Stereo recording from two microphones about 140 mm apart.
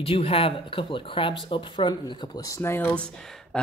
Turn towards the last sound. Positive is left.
turn(degrees=15)  # may be behind; listen again after turning